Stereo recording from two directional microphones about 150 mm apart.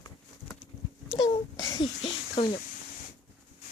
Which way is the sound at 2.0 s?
35° left (ahead or behind).